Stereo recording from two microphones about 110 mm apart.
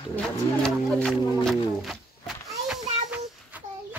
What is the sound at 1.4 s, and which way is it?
Music, centre (ahead or behind).